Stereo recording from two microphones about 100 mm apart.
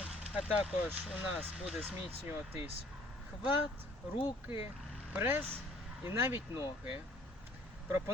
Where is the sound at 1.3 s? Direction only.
10° right (ahead or behind).